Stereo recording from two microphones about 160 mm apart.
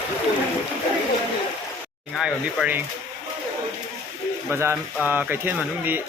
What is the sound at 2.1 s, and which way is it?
Speech, centre (ahead or behind).